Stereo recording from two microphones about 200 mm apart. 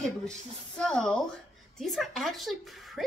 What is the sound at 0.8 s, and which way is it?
Speech, 5° left (ahead or behind).